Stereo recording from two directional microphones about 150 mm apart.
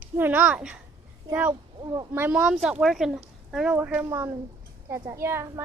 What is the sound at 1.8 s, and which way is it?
Speech, 30° right (ahead or behind).